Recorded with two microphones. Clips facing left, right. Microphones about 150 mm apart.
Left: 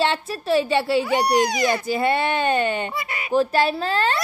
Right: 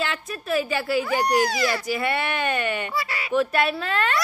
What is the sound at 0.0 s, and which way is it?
Speech, 30° left (ahead or behind).